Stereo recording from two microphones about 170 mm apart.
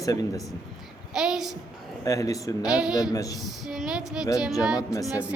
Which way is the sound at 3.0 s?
20° left (ahead or behind).